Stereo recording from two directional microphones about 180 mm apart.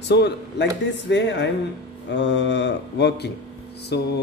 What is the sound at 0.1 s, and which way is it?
Speech, 70° left (ahead or behind).